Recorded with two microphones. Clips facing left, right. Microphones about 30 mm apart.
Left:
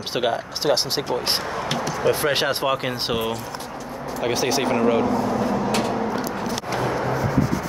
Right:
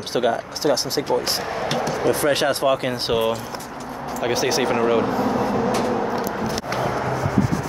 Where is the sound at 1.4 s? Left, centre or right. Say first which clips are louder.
Right 2 dB; centre.